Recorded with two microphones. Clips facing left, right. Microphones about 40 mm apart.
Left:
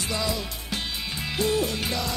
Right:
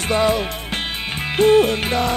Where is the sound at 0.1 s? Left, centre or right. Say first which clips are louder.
Right 12 dB; right.